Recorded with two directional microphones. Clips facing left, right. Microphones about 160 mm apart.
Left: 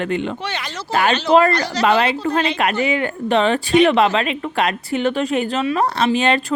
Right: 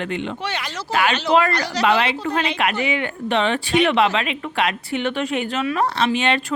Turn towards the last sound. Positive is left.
turn(degrees=40)  # may be behind; listen again after turning